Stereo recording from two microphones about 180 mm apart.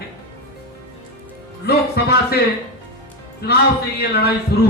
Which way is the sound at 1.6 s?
60° left (ahead or behind).